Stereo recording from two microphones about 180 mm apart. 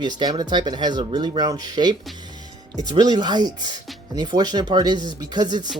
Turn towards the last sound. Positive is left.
turn(degrees=-25)  # may be behind; listen again after turning